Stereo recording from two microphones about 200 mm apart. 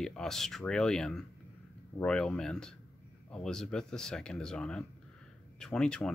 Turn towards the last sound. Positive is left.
turn(degrees=5)  # may be behind; listen again after turning